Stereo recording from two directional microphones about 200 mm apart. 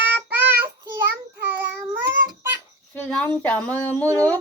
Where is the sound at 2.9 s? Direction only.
5° left (ahead or behind).